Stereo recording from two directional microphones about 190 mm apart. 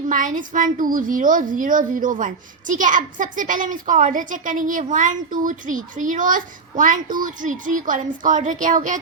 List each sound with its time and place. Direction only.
0.1 s a woman's voice: 45° right (ahead or behind)